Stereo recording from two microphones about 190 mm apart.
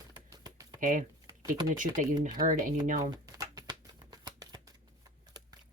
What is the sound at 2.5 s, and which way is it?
Speech, 45° right (ahead or behind).